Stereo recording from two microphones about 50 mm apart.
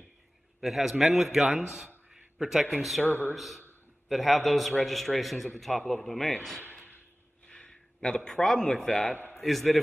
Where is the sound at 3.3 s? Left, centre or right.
Centre.